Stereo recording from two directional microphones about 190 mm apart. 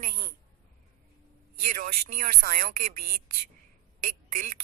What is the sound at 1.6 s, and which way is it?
Speech, 45° right (ahead or behind).